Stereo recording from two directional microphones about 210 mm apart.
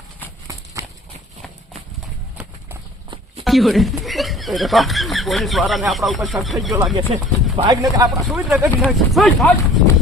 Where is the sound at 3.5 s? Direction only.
Centre (ahead or behind).